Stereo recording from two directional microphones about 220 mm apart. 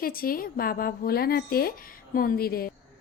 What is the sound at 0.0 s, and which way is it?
A woman's voice, 40° left (ahead or behind).